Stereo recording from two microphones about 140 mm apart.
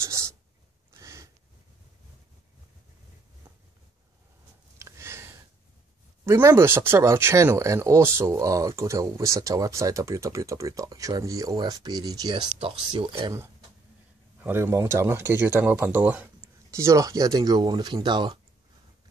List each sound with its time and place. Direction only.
0.9 s sniff: 25° right (ahead or behind)
4.7 s a sound: 20° right (ahead or behind)
6.2 s speech: 20° right (ahead or behind); by 13.3 s 40° right (ahead or behind)
14.4 s speech: 15° right (ahead or behind)
16.7 s speech: 20° right (ahead or behind)